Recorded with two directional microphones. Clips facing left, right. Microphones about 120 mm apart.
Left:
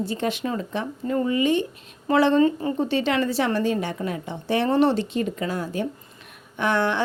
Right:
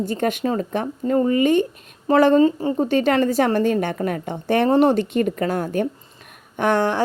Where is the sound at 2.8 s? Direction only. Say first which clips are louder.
Right 7 dB; 45° right (ahead or behind).